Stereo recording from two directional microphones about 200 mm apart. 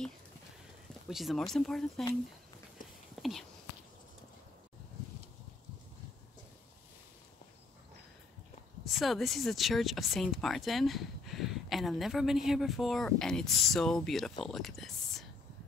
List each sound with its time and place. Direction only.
1.0 s speech: centre (ahead or behind)
3.2 s whispering: centre (ahead or behind)
8.8 s speech: centre (ahead or behind)